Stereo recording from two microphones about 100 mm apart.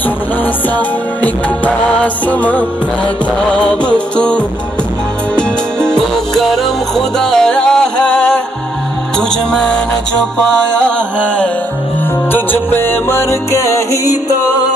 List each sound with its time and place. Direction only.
0.7 s music: 15° left (ahead or behind)
9.5 s music: 10° left (ahead or behind); by 14.1 s 30° left (ahead or behind)